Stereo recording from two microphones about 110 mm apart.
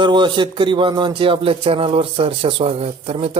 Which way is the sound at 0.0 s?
45° right (ahead or behind).